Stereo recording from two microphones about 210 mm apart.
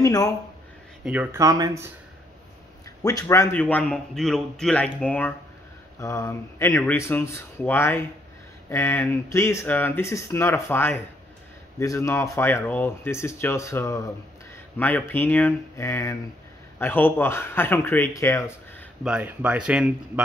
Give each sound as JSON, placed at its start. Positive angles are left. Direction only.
{"t": 0.0, "sound": "speech", "side_deg": 15}
{"t": 1.0, "sound": "speech", "side_deg": -5}
{"t": 3.0, "sound": "speech", "side_deg": 15}
{"t": 19.0, "sound": "speech", "side_deg": -5}